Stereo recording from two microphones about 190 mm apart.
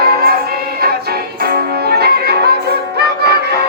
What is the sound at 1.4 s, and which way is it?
Music, 55° right (ahead or behind).